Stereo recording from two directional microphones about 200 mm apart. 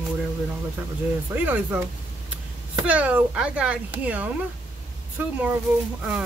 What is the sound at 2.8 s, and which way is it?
A man's voice, 5° right (ahead or behind).